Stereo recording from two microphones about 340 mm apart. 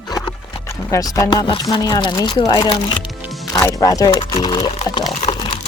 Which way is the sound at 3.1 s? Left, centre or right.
Centre.